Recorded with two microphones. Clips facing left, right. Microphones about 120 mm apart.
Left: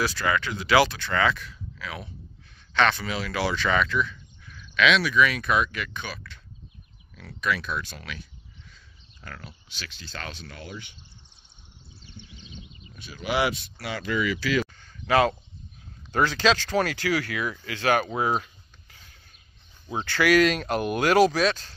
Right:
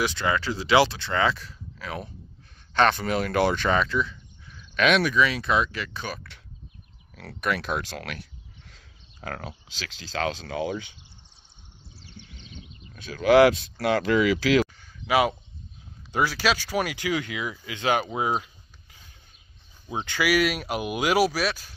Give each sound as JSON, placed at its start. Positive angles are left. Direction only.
{"t": 0.0, "sound": "speech", "side_deg": -25}
{"t": 3.7, "sound": "a sound", "side_deg": -30}
{"t": 4.7, "sound": "speech", "side_deg": -45}
{"t": 5.1, "sound": "speech", "side_deg": -25}
{"t": 7.2, "sound": "speech", "side_deg": -65}
{"t": 12.9, "sound": "speech", "side_deg": -90}
{"t": 14.8, "sound": "a sound", "side_deg": -10}
{"t": 16.1, "sound": "speech", "side_deg": -10}
{"t": 18.0, "sound": "a sound", "side_deg": -15}
{"t": 19.9, "sound": "speech", "side_deg": -15}